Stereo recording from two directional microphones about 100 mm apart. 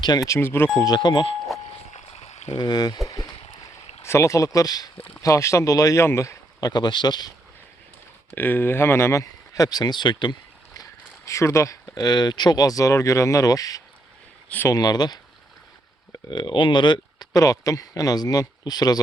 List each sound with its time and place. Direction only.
0.0 s speech: 40° left (ahead or behind)
0.3 s speech: 25° left (ahead or behind)
0.8 s speech: 45° left (ahead or behind)
2.2 s a sound: 90° left
2.6 s speech: 45° left (ahead or behind)
3.1 s a sound: 35° left (ahead or behind)
4.0 s speech: 30° left (ahead or behind); by 7.3 s 45° left (ahead or behind)
8.4 s speech: 20° left (ahead or behind); by 10.3 s 50° left (ahead or behind)
11.3 s speech: 30° left (ahead or behind)